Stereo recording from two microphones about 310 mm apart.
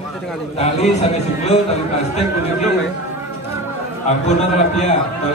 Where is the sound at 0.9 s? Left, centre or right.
Left.